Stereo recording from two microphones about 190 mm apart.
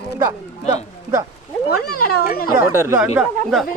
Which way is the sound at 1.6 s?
55° left (ahead or behind).